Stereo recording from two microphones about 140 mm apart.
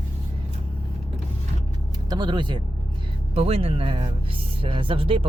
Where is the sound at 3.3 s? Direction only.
45° right (ahead or behind).